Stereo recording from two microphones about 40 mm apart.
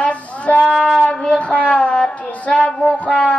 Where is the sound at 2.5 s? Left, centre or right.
Centre.